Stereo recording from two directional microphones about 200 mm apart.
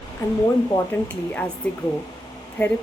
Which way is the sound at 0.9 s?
10° left (ahead or behind).